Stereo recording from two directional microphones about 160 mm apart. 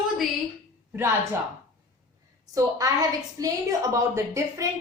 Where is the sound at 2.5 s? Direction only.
20° right (ahead or behind).